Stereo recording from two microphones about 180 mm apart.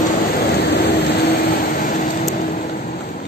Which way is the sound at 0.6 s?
70° left (ahead or behind).